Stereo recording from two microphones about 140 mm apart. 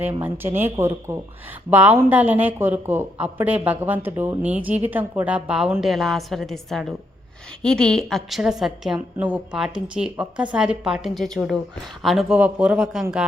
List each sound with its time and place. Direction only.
0.0 s a woman's voice: 15° right (ahead or behind)